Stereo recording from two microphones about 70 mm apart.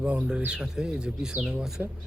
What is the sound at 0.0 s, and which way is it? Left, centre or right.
Speech, right.